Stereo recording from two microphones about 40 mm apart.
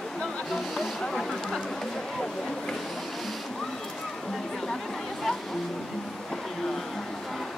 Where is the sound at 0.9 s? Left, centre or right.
Centre.